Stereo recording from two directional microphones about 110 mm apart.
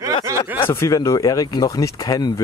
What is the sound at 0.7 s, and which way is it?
Speech, 25° left (ahead or behind).